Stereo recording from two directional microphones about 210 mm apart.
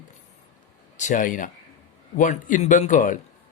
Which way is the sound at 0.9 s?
35° left (ahead or behind).